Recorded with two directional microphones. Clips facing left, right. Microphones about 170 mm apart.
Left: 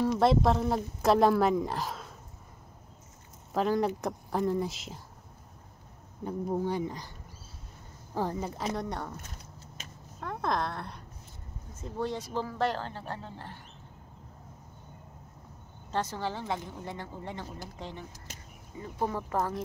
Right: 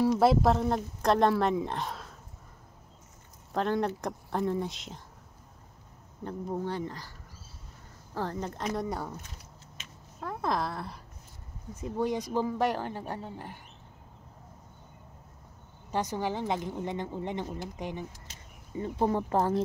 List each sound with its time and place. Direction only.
0.0 s speech: 5° right (ahead or behind)
3.5 s speech: 5° left (ahead or behind)
6.2 s speech: 10° left (ahead or behind)
8.1 s speech: 10° left (ahead or behind)
8.7 s speech: 5° right (ahead or behind)
10.2 s speech: 5° right (ahead or behind)
11.7 s speech: 15° right (ahead or behind)
15.9 s a woman's voice: 15° right (ahead or behind)
18.8 s a woman's voice: 30° right (ahead or behind)